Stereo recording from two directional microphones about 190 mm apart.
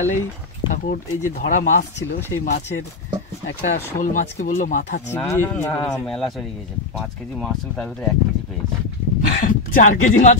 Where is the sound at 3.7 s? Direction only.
45° left (ahead or behind).